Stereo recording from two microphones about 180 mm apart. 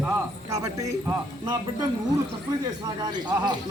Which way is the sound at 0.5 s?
20° right (ahead or behind).